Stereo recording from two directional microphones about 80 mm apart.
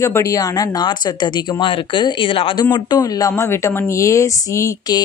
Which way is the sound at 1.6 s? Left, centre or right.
Left.